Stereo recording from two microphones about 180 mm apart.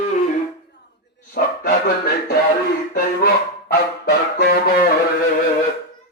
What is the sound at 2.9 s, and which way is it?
Honk, 60° left (ahead or behind).